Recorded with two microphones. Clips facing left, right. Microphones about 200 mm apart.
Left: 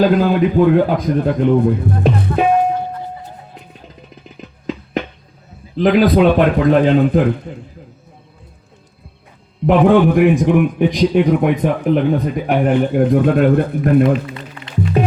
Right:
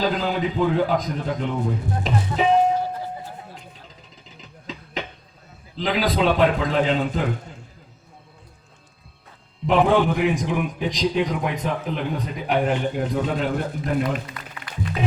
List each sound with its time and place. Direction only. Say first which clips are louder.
0.0 s a man's voice: left 10 dB; 55° left (ahead or behind)
5.7 s a man's voice: left 11 dB; 55° left (ahead or behind)
9.6 s a man's voice: left 7 dB; 60° left (ahead or behind)
14.0 s a sound: left 11 dB; 25° left (ahead or behind)
15.0 s music: left 9 dB; 55° left (ahead or behind)